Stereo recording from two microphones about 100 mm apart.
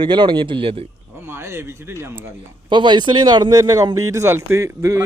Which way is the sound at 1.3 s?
25° right (ahead or behind).